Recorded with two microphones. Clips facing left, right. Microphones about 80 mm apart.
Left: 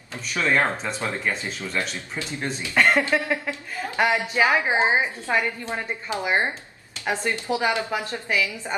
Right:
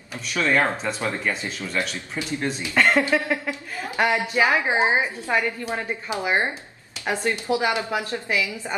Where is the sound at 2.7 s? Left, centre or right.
Centre.